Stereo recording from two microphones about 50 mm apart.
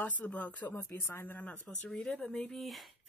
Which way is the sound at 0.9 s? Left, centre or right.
Left.